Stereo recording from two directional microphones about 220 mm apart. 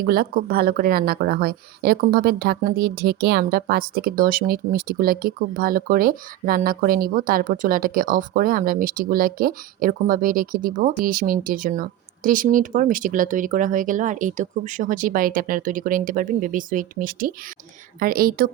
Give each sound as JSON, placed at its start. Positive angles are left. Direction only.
{"t": 0.0, "sound": "speech", "side_deg": -45}